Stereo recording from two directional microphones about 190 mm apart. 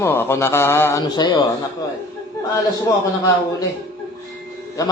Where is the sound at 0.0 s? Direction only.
10° left (ahead or behind).